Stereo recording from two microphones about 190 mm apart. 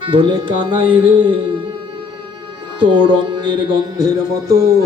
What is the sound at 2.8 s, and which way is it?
A man's voice, 25° right (ahead or behind).